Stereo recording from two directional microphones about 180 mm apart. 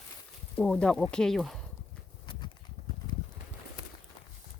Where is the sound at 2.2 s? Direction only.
25° left (ahead or behind).